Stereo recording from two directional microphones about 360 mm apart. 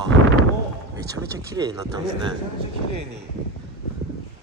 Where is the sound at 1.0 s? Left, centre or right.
Centre.